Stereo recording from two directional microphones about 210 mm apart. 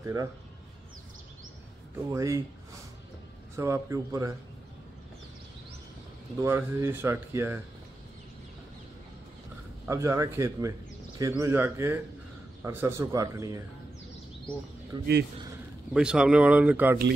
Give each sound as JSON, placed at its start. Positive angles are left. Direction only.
{"t": 0.0, "sound": "speech", "side_deg": -15}
{"t": 2.1, "sound": "speech", "side_deg": -15}
{"t": 3.5, "sound": "speech", "side_deg": -15}
{"t": 6.4, "sound": "speech", "side_deg": -10}
{"t": 9.8, "sound": "speech", "side_deg": -15}
{"t": 14.9, "sound": "speech", "side_deg": -20}
{"t": 15.9, "sound": "speech", "side_deg": -5}